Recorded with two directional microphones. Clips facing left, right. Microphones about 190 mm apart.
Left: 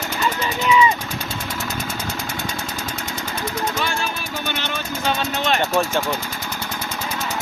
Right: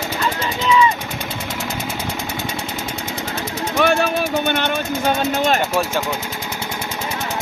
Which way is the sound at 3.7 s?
60° right (ahead or behind).